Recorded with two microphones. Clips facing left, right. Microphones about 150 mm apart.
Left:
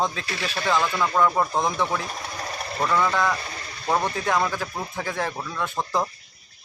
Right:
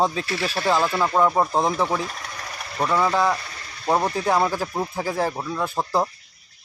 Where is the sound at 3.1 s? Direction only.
30° right (ahead or behind).